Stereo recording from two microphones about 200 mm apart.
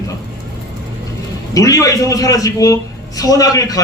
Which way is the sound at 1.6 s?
15° left (ahead or behind).